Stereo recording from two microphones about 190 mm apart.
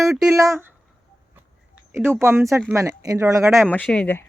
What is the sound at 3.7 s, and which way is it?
Speech, 5° left (ahead or behind).